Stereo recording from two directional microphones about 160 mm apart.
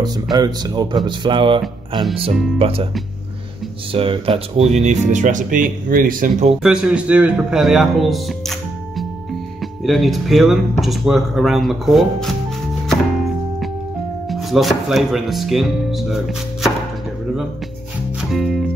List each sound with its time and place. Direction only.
0.0 s speech: 25° right (ahead or behind)
2.6 s speech: 35° right (ahead or behind)
3.9 s speech: 35° right (ahead or behind)
4.8 s speech: 50° right (ahead or behind)
6.6 s a man's voice: 5° right (ahead or behind)
12.8 s music: centre (ahead or behind)
14.3 s speech: centre (ahead or behind)
18.3 s music: centre (ahead or behind)